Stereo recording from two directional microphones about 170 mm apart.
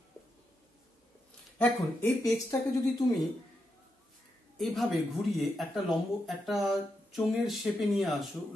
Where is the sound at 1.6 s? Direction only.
15° left (ahead or behind).